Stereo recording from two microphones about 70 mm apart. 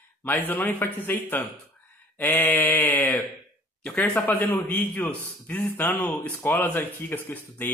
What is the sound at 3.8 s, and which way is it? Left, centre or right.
Speech, centre.